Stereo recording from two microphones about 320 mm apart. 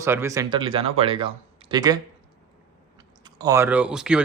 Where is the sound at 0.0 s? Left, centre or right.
Centre.